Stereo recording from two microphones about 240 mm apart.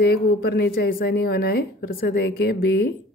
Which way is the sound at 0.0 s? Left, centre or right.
Left.